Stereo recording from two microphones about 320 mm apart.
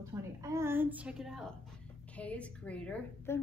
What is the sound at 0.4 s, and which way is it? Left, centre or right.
A woman's voice, centre.